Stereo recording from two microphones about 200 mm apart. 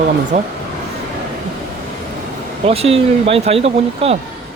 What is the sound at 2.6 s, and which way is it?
Speech, 30° right (ahead or behind).